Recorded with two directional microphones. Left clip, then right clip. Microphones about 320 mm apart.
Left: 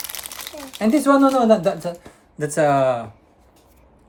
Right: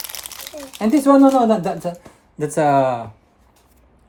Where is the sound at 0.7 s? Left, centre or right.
Centre.